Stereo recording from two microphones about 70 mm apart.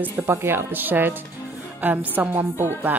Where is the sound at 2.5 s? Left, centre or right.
Right.